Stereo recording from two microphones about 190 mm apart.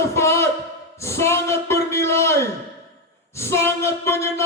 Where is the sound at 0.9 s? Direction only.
15° left (ahead or behind).